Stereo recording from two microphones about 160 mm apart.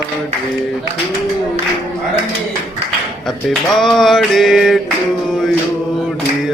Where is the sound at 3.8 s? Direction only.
Centre (ahead or behind).